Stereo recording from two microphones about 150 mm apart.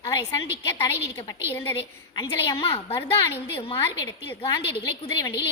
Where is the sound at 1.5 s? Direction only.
15° left (ahead or behind).